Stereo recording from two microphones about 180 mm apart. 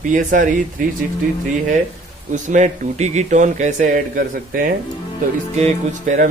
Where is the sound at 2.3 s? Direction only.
45° right (ahead or behind).